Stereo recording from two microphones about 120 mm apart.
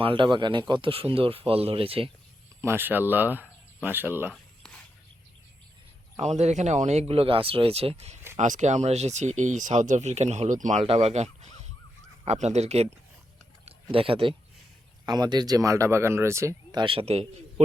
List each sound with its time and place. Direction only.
0.0 s speech: 45° right (ahead or behind)
2.6 s speech: 20° right (ahead or behind)
4.3 s a sound: 10° left (ahead or behind)
6.1 s speech: 65° right (ahead or behind)
7.1 s speech: 50° right (ahead or behind)
8.4 s speech: 90° right
10.8 s speech: 65° right (ahead or behind)
13.9 s speech: 50° right (ahead or behind)
15.0 s speech: 35° right (ahead or behind)
16.7 s speech: 45° right (ahead or behind)